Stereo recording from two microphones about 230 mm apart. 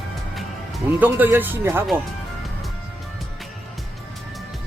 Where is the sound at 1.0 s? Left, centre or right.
Centre.